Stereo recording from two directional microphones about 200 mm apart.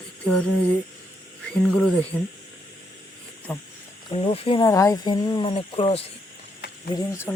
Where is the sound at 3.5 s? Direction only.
5° left (ahead or behind).